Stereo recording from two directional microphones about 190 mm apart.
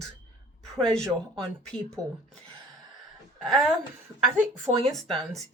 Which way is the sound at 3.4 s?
Centre (ahead or behind).